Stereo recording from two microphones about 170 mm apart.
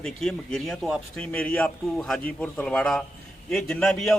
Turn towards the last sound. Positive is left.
turn(degrees=5)  # may be behind; listen again after turning